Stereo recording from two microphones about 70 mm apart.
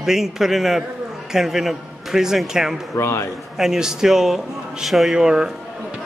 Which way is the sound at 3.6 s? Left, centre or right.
Centre.